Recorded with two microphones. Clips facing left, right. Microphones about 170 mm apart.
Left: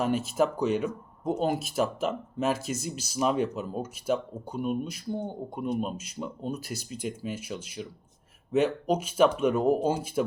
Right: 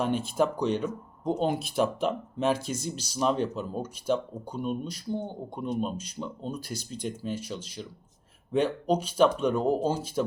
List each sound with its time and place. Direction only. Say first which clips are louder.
0.0 s speech: left 1 dB; 5° left (ahead or behind)